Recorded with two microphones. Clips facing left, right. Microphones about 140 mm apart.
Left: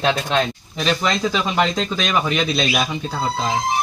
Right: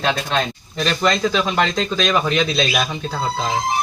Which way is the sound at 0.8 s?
10° left (ahead or behind).